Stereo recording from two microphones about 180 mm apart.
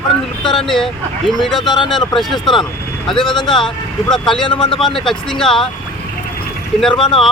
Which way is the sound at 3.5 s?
Centre (ahead or behind).